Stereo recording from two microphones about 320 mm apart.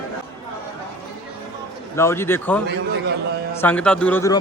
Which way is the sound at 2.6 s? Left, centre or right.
Right.